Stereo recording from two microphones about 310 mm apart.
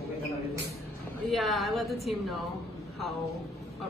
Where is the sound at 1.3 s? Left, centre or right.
Centre.